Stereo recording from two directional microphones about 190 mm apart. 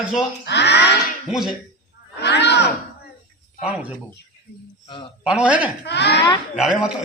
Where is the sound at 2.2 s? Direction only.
60° left (ahead or behind).